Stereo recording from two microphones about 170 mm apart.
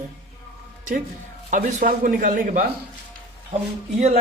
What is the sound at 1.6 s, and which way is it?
Speech, 50° right (ahead or behind).